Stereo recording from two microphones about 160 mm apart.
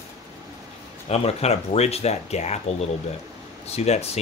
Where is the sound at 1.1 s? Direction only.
40° left (ahead or behind).